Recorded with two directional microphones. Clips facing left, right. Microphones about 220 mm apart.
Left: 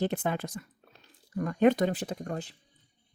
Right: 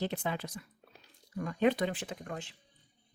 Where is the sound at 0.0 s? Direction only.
50° left (ahead or behind).